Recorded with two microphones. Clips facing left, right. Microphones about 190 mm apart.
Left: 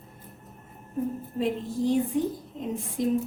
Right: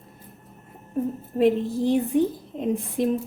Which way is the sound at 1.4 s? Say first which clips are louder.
Right 7 dB; 65° right (ahead or behind).